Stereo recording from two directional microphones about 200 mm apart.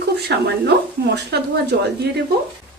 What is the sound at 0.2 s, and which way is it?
A woman's voice, 55° right (ahead or behind).